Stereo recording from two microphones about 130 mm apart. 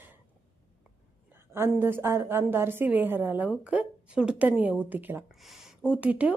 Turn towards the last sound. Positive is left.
turn(degrees=-10)  # may be behind; listen again after turning